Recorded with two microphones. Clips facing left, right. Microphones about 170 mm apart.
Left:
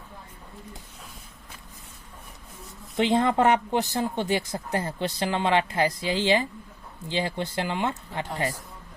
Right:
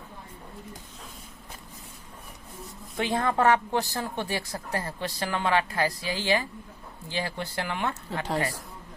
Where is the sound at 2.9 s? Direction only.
20° left (ahead or behind).